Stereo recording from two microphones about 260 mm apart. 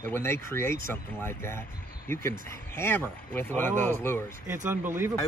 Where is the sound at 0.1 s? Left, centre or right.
Centre.